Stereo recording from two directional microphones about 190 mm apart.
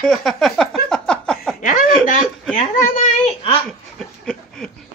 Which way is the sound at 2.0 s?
45° left (ahead or behind).